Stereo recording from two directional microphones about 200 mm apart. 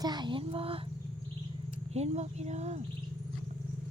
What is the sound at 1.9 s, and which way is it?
Speech, 35° right (ahead or behind).